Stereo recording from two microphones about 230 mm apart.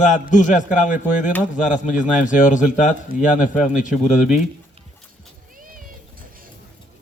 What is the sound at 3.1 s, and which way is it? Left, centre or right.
Speech, right.